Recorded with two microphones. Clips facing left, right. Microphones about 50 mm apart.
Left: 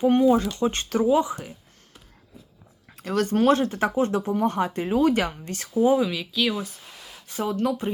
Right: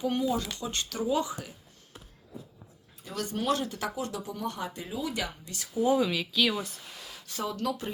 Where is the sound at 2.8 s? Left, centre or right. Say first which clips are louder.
Left 11 dB; left.